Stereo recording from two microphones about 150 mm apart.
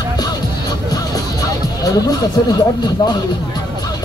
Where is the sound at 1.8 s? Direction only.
25° left (ahead or behind).